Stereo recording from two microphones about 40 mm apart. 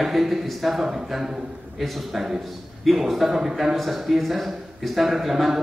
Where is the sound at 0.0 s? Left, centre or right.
Centre.